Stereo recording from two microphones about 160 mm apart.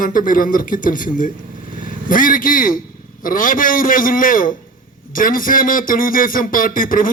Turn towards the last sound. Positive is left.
turn(degrees=60)  # may be behind; listen again after turning